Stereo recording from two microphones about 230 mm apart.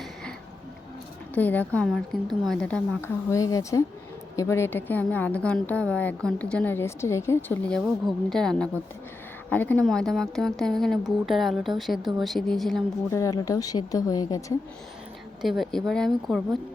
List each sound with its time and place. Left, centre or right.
1.4 s a woman's voice: centre
13.1 s a woman's voice: centre
15.4 s speech: centre